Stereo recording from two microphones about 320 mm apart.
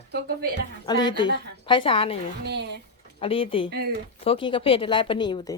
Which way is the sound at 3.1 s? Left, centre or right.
Centre.